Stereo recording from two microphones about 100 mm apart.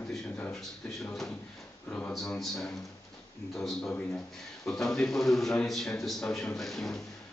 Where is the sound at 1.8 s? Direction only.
15° left (ahead or behind).